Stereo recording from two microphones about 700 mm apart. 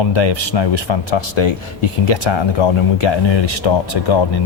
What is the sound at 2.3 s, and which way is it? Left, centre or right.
Speech, left.